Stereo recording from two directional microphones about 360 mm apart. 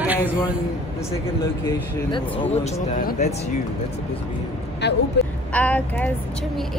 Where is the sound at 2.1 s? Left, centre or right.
Centre.